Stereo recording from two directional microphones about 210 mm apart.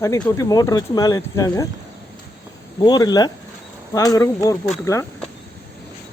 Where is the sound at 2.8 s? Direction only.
20° left (ahead or behind).